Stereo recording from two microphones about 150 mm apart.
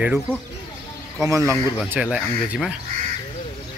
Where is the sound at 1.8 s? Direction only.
5° right (ahead or behind).